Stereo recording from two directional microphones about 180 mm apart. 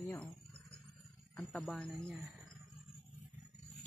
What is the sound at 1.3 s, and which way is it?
Speech, centre (ahead or behind).